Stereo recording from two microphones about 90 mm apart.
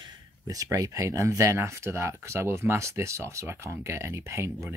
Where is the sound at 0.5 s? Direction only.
40° right (ahead or behind).